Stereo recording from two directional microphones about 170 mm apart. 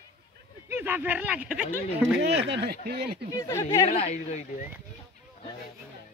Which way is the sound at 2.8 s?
65° right (ahead or behind).